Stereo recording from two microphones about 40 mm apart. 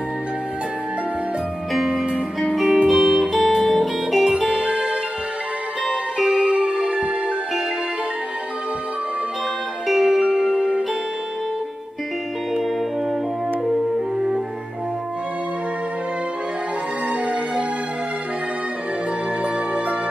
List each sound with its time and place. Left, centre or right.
1.7 s music: centre
4.6 s music: centre
9.9 s music: centre
17.1 s music: right
19.4 s music: right